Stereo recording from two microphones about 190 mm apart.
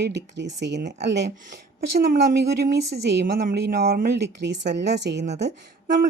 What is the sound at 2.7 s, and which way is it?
Speech, 60° right (ahead or behind).